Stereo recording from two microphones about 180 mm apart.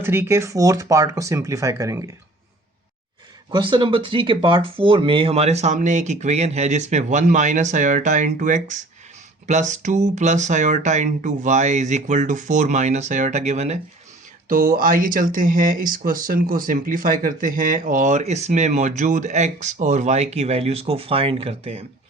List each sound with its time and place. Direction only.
0.0 s speech: 10° right (ahead or behind)
3.5 s speech: 25° right (ahead or behind)
14.4 s speech: 55° right (ahead or behind); by 21.8 s 35° right (ahead or behind)